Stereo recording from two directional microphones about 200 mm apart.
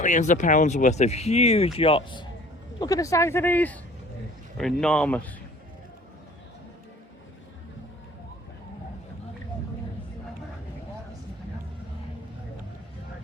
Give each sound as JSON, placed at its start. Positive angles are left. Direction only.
{"t": 0.0, "sound": "speech", "side_deg": 40}